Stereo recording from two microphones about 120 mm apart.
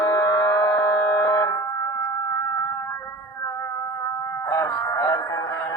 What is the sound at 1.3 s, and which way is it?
Music, 25° left (ahead or behind).